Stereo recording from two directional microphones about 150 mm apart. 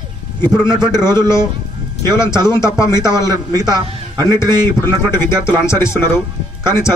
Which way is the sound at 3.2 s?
25° right (ahead or behind).